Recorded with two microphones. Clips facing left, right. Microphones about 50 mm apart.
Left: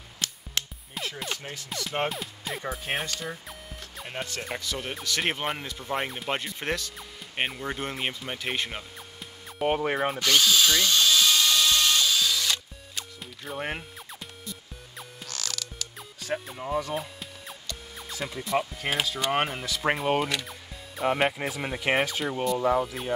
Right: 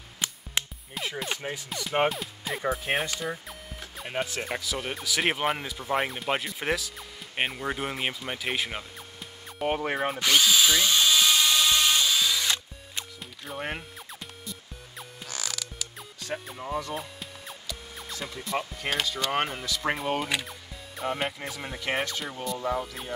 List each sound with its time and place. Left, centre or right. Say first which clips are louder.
0.2 s music: right 1 dB; centre
1.2 s speech: right 2 dB; centre
10.2 s drill: right 1 dB; centre
13.5 s music: left 1 dB; centre
16.2 s speech: left 3 dB; centre
20.4 s music: even; centre
21.5 s speech: left 4 dB; centre